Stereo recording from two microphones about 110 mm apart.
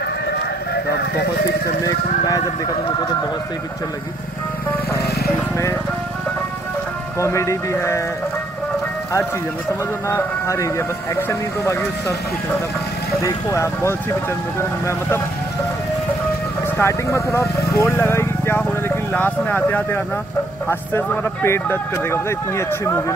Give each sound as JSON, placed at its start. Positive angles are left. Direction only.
{"t": 7.2, "sound": "speech", "side_deg": 25}
{"t": 10.0, "sound": "speech", "side_deg": 25}
{"t": 13.2, "sound": "speech", "side_deg": 30}
{"t": 16.7, "sound": "speech", "side_deg": 25}